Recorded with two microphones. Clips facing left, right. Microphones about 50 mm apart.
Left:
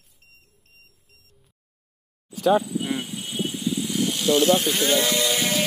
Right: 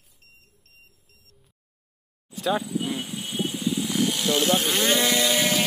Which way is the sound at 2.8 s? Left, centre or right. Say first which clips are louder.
Left 2 dB; centre.